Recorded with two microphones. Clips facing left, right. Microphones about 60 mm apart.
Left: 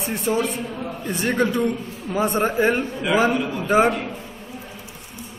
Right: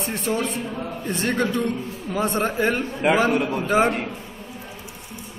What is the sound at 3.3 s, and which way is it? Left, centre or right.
Speech, right.